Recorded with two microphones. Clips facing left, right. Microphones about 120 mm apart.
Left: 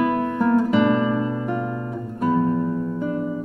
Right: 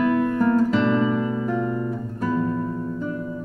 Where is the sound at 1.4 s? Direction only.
5° left (ahead or behind).